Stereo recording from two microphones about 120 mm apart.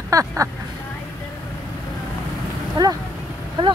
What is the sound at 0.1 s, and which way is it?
Speech, 25° right (ahead or behind).